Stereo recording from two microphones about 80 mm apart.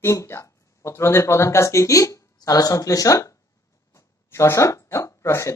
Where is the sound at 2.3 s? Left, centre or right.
Left.